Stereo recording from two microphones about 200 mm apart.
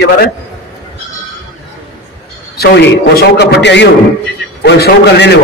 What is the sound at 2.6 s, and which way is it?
A man's voice, 55° left (ahead or behind).